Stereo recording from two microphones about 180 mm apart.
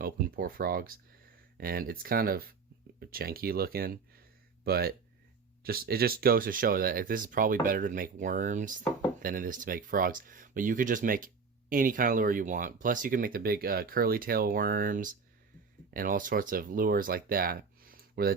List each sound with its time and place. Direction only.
0.0 s speech: 55° right (ahead or behind)